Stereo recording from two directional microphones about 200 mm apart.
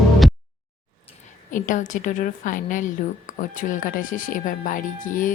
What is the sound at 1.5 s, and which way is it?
Speech, 40° left (ahead or behind).